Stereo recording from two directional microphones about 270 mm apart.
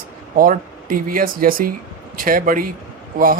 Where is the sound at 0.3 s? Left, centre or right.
Right.